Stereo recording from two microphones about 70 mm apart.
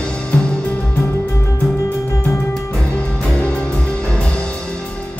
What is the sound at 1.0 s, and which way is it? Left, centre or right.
Music, left.